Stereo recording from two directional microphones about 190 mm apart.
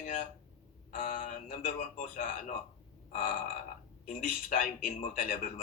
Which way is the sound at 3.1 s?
40° left (ahead or behind).